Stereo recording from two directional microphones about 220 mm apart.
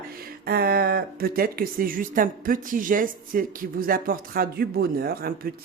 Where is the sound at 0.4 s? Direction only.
45° right (ahead or behind).